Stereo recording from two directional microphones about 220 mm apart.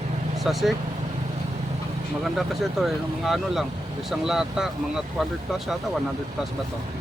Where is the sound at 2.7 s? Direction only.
Centre (ahead or behind).